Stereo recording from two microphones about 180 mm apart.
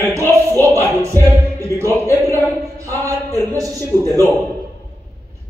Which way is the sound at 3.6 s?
20° right (ahead or behind).